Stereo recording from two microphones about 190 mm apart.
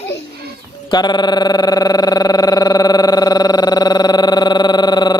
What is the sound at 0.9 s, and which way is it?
Pulse, 20° left (ahead or behind).